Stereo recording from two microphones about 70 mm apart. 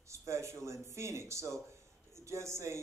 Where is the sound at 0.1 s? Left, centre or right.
Right.